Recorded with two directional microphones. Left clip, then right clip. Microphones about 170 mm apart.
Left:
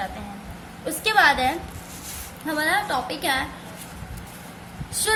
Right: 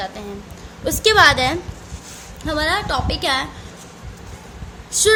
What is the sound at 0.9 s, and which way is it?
A woman's voice, 60° right (ahead or behind).